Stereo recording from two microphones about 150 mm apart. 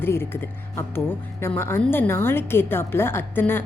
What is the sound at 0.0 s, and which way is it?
A woman's voice, 15° left (ahead or behind).